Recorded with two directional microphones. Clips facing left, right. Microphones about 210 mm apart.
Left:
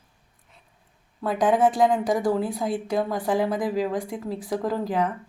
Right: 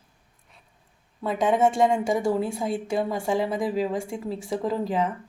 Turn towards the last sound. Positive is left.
turn(degrees=0)  # may be behind; listen again after turning